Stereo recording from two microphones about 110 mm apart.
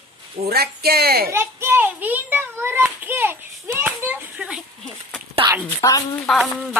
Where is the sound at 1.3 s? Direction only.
20° right (ahead or behind).